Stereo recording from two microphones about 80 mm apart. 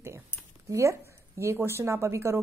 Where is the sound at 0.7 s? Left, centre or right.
Right.